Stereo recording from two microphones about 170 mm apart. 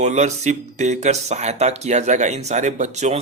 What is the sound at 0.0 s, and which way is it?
Speech, 45° right (ahead or behind).